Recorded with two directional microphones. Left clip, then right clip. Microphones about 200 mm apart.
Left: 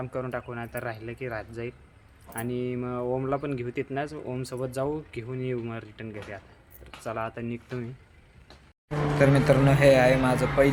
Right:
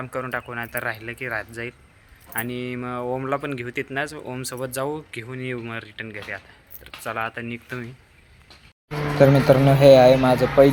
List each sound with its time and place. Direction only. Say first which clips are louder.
0.0 s speech: right 4 dB; centre (ahead or behind)
9.1 s a man's voice: right 6 dB; 20° right (ahead or behind)